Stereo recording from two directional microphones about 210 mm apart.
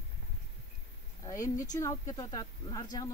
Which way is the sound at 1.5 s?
15° left (ahead or behind).